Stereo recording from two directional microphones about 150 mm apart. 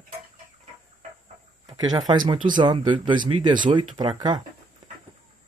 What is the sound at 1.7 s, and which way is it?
Speech, 25° right (ahead or behind).